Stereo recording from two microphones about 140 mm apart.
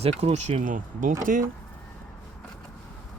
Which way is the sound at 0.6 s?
70° right (ahead or behind).